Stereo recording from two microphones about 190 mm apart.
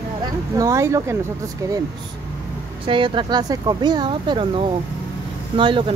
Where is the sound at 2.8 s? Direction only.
25° right (ahead or behind).